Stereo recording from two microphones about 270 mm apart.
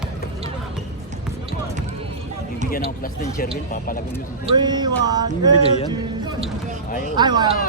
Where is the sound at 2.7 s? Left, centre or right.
Left.